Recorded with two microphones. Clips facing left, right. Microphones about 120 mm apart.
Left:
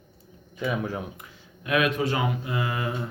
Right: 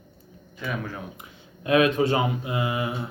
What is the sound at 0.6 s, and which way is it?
Speech, 20° left (ahead or behind).